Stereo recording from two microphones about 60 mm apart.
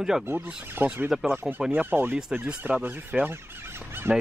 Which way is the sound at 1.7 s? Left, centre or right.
Right.